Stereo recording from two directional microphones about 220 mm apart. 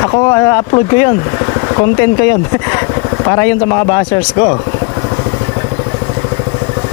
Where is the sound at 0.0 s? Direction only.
15° left (ahead or behind).